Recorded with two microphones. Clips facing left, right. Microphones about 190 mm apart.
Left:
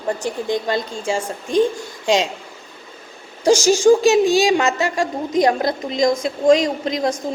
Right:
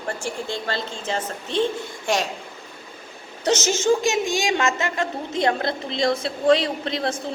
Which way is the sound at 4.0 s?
15° right (ahead or behind).